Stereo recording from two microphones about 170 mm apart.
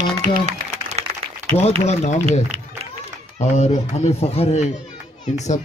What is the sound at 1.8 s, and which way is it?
Speech, 40° left (ahead or behind).